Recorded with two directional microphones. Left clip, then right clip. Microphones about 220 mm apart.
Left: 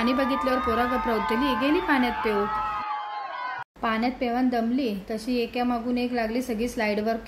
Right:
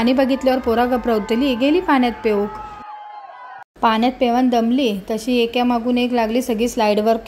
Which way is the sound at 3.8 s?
30° right (ahead or behind).